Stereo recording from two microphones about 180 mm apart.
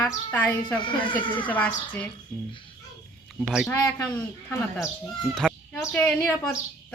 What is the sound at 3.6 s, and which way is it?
Speech, 10° left (ahead or behind).